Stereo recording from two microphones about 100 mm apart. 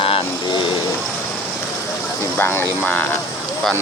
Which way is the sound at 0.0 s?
65° left (ahead or behind).